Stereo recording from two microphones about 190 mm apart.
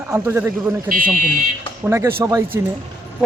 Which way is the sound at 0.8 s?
45° right (ahead or behind).